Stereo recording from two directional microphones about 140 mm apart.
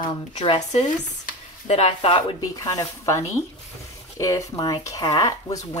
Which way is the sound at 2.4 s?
25° left (ahead or behind).